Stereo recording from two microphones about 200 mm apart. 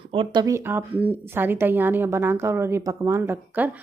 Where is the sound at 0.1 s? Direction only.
25° right (ahead or behind).